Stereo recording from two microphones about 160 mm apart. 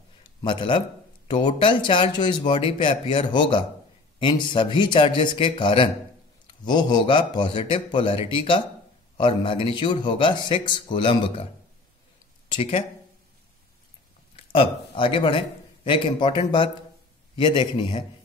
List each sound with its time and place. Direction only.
0.4 s a man's voice: 30° left (ahead or behind)
12.4 s speech: 35° left (ahead or behind)
14.3 s a man's voice: 35° left (ahead or behind)